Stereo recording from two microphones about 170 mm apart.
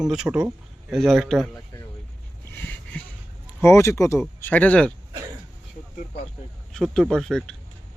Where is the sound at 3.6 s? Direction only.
15° left (ahead or behind).